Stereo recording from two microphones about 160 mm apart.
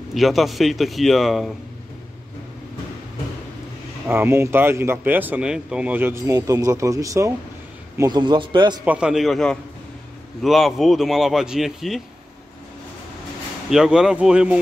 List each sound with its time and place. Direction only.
0.1 s speech: centre (ahead or behind)
4.1 s a man's voice: 15° right (ahead or behind)
8.8 s speech: 5° right (ahead or behind)
13.7 s speech: 5° right (ahead or behind)